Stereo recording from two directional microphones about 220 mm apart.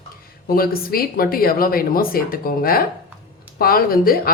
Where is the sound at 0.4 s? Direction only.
40° left (ahead or behind).